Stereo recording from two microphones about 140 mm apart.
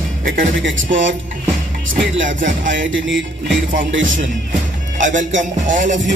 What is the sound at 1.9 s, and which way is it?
Speech, 70° right (ahead or behind).